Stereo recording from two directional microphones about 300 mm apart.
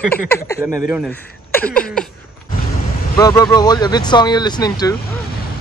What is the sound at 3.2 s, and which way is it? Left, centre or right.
Speech, centre.